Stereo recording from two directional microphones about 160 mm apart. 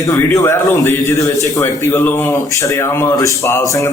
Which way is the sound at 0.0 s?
20° left (ahead or behind).